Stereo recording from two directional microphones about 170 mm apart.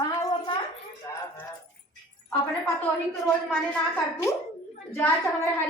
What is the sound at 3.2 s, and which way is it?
Speech, 5° left (ahead or behind).